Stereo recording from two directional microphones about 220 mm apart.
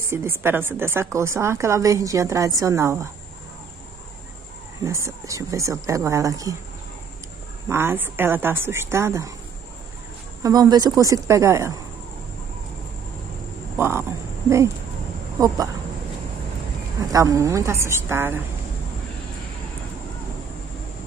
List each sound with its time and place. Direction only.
0.1 s a woman's voice: 10° right (ahead or behind)
4.8 s a woman's voice: 15° right (ahead or behind)
7.6 s a woman's voice: 10° right (ahead or behind)
10.4 s a woman's voice: 15° right (ahead or behind)
13.7 s a sound: 10° right (ahead or behind)
15.4 s a woman's voice: 15° right (ahead or behind)
17.1 s a woman's voice: 15° right (ahead or behind)